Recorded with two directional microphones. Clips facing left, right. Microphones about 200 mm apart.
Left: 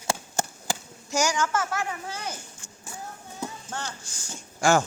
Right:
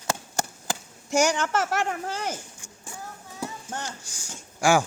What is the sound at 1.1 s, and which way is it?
Speech, 60° right (ahead or behind).